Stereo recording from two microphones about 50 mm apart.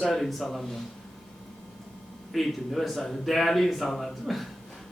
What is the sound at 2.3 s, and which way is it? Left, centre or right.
A man's voice, centre.